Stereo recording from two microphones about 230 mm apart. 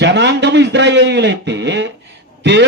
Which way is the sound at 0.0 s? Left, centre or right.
Right.